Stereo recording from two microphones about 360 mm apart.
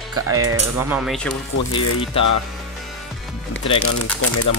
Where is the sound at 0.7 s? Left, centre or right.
Centre.